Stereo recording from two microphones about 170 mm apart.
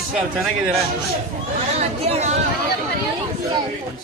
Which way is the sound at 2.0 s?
40° right (ahead or behind).